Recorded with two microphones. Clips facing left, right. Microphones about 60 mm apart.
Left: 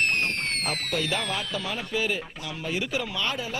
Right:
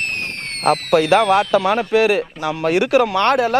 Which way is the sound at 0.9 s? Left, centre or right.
Right.